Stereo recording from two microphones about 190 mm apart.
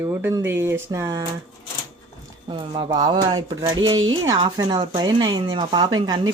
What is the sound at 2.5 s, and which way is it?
Speech, 25° right (ahead or behind).